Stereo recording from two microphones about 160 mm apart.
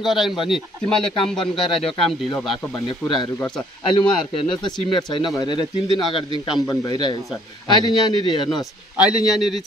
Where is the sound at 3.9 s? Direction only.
30° left (ahead or behind).